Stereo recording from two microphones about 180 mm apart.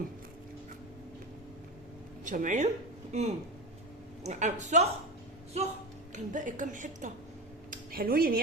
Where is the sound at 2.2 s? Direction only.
45° right (ahead or behind).